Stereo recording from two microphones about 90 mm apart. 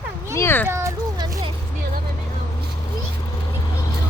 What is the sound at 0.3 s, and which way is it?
Speech, 25° left (ahead or behind).